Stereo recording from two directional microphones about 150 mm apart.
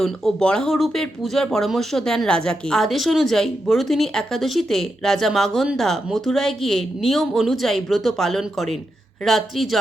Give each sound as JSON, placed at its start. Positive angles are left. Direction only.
{"t": 0.0, "sound": "speech", "side_deg": 5}